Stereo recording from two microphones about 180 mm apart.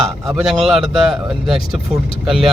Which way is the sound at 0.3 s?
Centre (ahead or behind).